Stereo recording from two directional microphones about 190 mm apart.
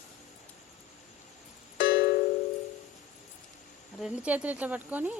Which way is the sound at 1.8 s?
55° left (ahead or behind).